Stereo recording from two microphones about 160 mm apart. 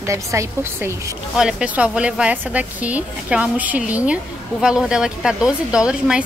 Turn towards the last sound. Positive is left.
turn(degrees=-5)  # may be behind; listen again after turning